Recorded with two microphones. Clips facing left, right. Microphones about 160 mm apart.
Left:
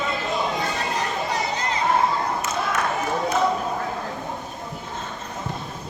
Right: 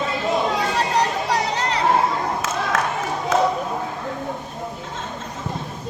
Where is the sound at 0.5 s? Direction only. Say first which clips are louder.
Right 5 dB; 80° right.